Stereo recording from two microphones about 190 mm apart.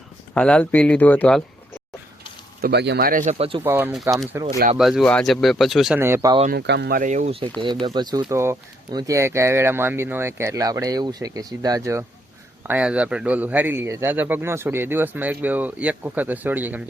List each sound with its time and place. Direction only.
0.3 s speech: 5° left (ahead or behind)
2.6 s speech: 55° right (ahead or behind); by 3.6 s 30° right (ahead or behind)
3.6 s a man's voice: 10° right (ahead or behind)
4.8 s speech: centre (ahead or behind)
6.5 s speech: 60° right (ahead or behind)
7.0 s speech: 40° right (ahead or behind)
7.6 s a man's voice: 25° right (ahead or behind)
12.6 s a man's voice: 5° right (ahead or behind)